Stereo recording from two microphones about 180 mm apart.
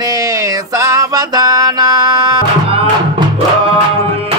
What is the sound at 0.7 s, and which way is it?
Music, 20° right (ahead or behind).